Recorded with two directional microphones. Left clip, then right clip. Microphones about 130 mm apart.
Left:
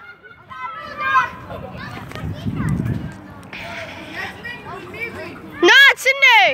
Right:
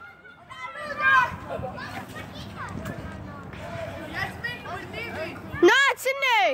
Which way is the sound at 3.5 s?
10° right (ahead or behind).